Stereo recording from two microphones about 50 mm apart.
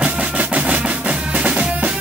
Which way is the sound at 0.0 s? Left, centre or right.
Right.